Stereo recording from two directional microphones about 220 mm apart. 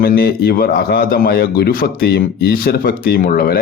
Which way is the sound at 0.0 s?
45° left (ahead or behind).